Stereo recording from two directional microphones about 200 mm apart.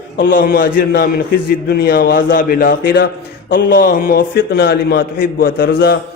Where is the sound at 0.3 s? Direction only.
45° left (ahead or behind).